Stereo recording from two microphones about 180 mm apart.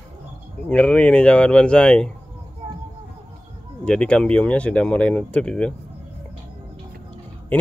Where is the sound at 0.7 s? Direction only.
5° left (ahead or behind).